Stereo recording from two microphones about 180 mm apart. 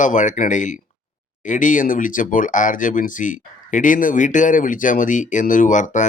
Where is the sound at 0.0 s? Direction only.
45° left (ahead or behind).